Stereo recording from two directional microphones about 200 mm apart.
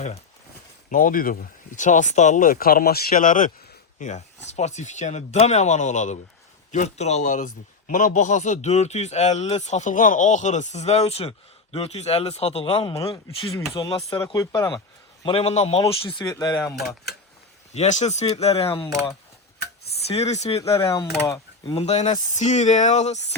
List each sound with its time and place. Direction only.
0.9 s a man's voice: 40° left (ahead or behind); by 16.6 s 15° left (ahead or behind)
16.6 s speech: centre (ahead or behind)
17.7 s speech: 35° left (ahead or behind)
20.1 s a man's voice: 30° left (ahead or behind)
21.2 s speech: 15° left (ahead or behind)
21.8 s speech: 35° left (ahead or behind)